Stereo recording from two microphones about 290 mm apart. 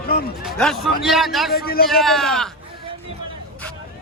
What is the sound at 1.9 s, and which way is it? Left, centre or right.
Speech, centre.